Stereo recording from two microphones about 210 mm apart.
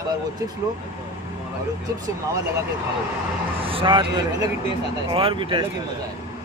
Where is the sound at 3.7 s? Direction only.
25° right (ahead or behind).